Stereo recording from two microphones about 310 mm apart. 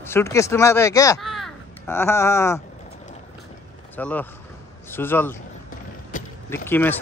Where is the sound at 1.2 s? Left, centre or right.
Centre.